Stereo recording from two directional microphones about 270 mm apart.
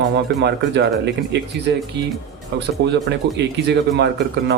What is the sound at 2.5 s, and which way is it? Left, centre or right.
Speech, right.